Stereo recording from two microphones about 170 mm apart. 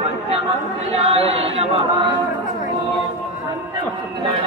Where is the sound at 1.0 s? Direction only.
40° right (ahead or behind).